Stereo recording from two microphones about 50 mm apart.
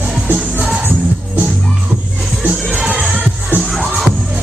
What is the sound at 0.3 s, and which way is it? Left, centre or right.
Music, right.